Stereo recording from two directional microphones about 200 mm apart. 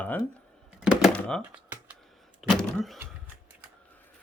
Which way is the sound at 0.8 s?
Centre (ahead or behind).